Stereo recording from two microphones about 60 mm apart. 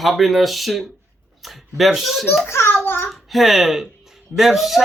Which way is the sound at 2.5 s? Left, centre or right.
Left.